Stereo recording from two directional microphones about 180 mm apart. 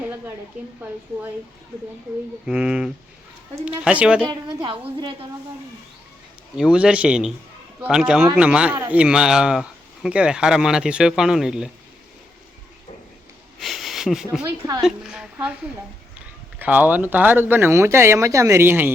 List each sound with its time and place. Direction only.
0.6 s speech: 5° right (ahead or behind)
2.5 s speech: 5° right (ahead or behind)
4.3 s a woman's voice: 25° right (ahead or behind)
6.6 s speech: 5° right (ahead or behind)
13.6 s sniff: centre (ahead or behind)
14.8 s speech: 5° right (ahead or behind)
16.6 s speech: 10° right (ahead or behind)